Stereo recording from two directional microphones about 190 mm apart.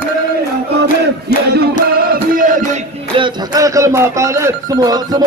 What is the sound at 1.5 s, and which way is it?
Music, 55° right (ahead or behind).